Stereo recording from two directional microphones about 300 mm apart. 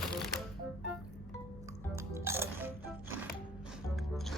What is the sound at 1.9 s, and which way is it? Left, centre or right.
Music, centre.